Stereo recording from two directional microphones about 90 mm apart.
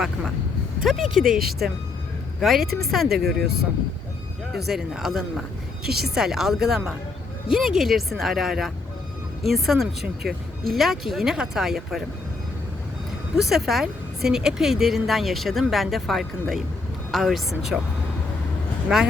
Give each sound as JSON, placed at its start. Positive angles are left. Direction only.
{"t": 0.9, "sound": "speech", "side_deg": 0}
{"t": 4.5, "sound": "speech", "side_deg": -5}
{"t": 13.3, "sound": "speech", "side_deg": -5}
{"t": 18.9, "sound": "speech", "side_deg": -5}